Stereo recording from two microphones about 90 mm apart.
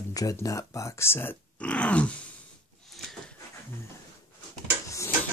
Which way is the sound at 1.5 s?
15° left (ahead or behind).